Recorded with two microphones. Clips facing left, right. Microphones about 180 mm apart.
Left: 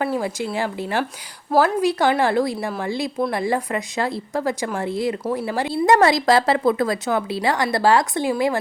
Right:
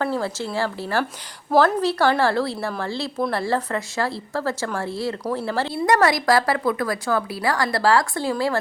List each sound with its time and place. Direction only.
0.0 s speech: 15° left (ahead or behind)
5.7 s a woman's voice: 25° left (ahead or behind)